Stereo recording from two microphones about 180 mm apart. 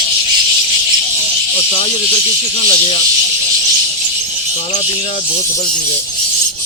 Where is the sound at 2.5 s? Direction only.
30° left (ahead or behind).